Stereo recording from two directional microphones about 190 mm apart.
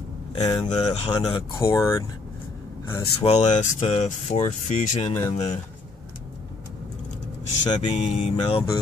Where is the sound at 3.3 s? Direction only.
35° left (ahead or behind).